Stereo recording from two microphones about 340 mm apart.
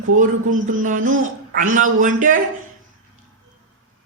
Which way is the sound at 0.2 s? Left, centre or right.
Right.